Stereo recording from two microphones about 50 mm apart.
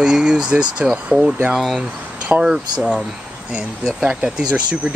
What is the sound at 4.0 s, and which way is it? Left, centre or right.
Speech, right.